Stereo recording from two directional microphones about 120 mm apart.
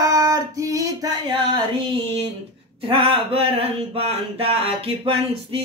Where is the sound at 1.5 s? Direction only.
55° right (ahead or behind).